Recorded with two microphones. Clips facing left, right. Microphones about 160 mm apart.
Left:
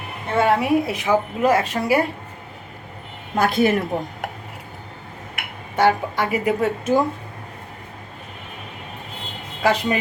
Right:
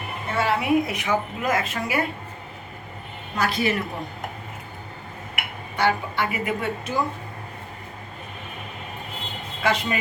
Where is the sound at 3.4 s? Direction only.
50° left (ahead or behind).